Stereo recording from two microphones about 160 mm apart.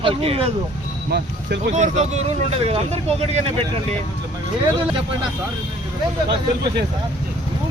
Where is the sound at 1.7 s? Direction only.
50° right (ahead or behind).